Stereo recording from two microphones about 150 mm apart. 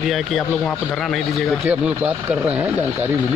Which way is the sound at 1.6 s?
10° right (ahead or behind).